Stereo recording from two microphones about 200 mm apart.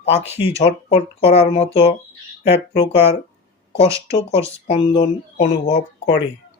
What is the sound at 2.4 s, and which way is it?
Speech, 60° left (ahead or behind).